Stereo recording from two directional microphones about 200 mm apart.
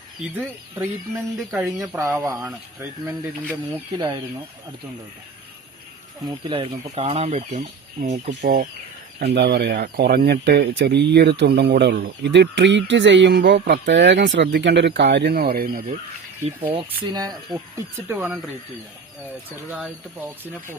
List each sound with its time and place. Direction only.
0.3 s speech: 15° right (ahead or behind)
3.9 s speech: 20° right (ahead or behind)
6.2 s speech: 25° right (ahead or behind); by 8.6 s 40° right (ahead or behind)
9.1 s speech: 55° right (ahead or behind)
16.7 s speech: 20° right (ahead or behind)
19.7 s speech: 10° right (ahead or behind)